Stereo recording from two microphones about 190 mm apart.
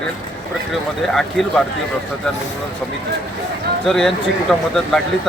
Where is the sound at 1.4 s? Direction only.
5° left (ahead or behind).